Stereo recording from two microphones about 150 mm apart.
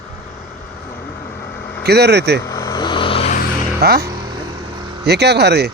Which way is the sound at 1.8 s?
90° right.